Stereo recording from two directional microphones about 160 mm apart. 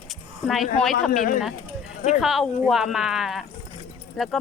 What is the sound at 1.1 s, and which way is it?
Speech, 60° left (ahead or behind).